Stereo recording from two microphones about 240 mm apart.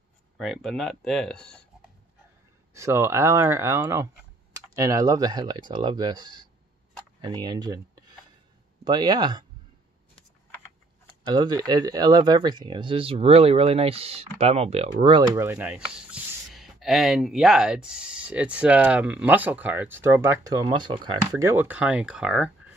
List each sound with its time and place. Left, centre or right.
0.4 s speech: centre
2.7 s speech: centre
11.2 s speech: centre